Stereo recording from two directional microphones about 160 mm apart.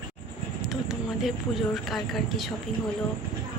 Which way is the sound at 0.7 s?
Centre (ahead or behind).